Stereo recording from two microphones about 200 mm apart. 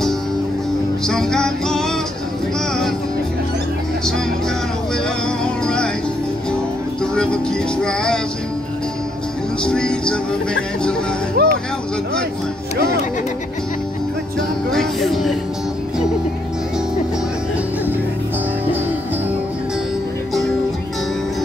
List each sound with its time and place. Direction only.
1.0 s music: 5° left (ahead or behind)
5.4 s music: 5° left (ahead or behind)
7.8 s music: 5° left (ahead or behind)
9.7 s speech: 5° left (ahead or behind)
11.4 s music: 50° right (ahead or behind)
14.7 s music: centre (ahead or behind)